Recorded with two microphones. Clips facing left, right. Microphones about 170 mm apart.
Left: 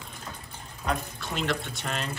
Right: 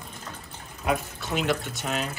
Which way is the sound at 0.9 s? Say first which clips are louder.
Right 4 dB; 5° right (ahead or behind).